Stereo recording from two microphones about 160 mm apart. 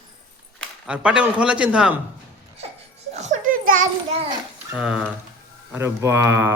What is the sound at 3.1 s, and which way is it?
Music, 45° right (ahead or behind).